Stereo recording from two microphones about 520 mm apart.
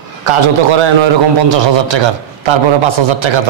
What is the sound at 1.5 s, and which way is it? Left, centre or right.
A man's voice, right.